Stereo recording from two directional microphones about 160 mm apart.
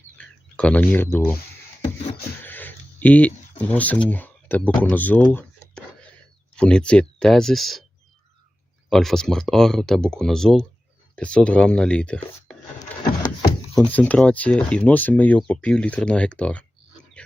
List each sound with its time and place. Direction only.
0.2 s speech: 5° left (ahead or behind)
2.4 s speech: 10° left (ahead or behind)
8.9 s speech: centre (ahead or behind)
13.7 s speech: 10° left (ahead or behind)